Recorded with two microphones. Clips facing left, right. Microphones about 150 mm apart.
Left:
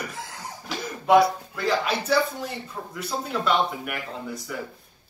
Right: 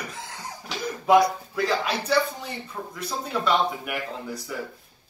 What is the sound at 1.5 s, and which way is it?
Speech, centre (ahead or behind).